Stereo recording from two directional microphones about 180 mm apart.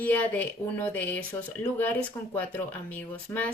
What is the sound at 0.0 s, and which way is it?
Speech, 10° left (ahead or behind).